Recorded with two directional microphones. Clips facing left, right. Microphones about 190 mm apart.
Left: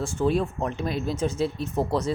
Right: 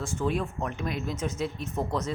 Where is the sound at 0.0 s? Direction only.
30° left (ahead or behind).